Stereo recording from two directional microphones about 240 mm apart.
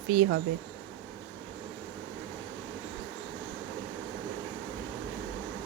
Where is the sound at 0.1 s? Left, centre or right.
Right.